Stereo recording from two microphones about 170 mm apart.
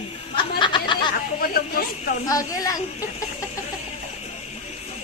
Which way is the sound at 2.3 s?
20° left (ahead or behind).